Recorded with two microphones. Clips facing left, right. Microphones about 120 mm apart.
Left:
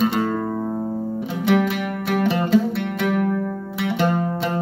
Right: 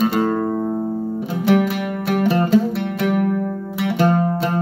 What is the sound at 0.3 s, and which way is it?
Music, 20° right (ahead or behind).